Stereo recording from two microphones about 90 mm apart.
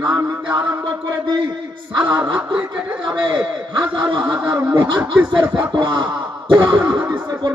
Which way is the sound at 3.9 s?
65° right (ahead or behind).